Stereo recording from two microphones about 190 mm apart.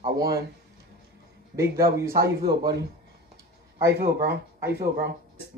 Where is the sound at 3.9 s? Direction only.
60° right (ahead or behind).